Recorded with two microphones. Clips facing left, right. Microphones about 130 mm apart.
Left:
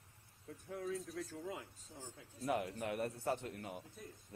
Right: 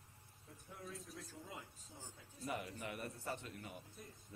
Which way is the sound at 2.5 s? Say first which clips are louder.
Left 7 dB; 85° left.